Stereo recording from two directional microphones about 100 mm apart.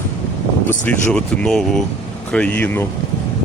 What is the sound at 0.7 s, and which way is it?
Speech, 15° left (ahead or behind).